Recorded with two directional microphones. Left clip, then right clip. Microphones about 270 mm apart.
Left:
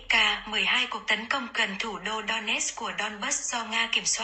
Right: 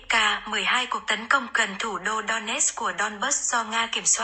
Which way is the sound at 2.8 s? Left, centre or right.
Right.